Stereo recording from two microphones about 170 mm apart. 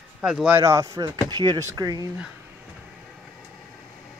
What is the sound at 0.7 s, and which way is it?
Speech, 20° right (ahead or behind).